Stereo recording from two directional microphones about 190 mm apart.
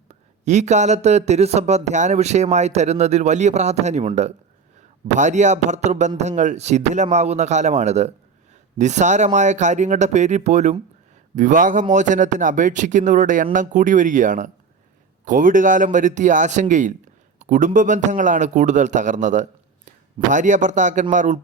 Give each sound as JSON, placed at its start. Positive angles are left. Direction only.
{"t": 0.1, "sound": "a man's voice", "side_deg": -35}
{"t": 17.4, "sound": "a sound", "side_deg": -40}
{"t": 17.7, "sound": "speech", "side_deg": -40}